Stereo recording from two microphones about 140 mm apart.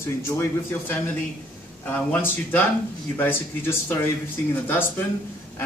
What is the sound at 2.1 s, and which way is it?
Speech, 10° left (ahead or behind).